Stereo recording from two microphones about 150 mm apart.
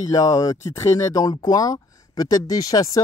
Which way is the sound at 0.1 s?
20° left (ahead or behind).